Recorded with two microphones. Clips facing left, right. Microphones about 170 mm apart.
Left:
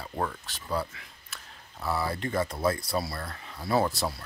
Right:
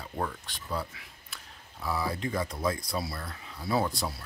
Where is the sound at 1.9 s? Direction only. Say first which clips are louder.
Left 1 dB; 65° left (ahead or behind).